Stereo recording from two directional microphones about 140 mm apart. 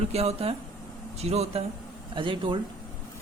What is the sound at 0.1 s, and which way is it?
Speech, 50° right (ahead or behind).